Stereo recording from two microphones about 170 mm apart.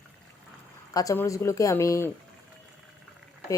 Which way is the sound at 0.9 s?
15° left (ahead or behind).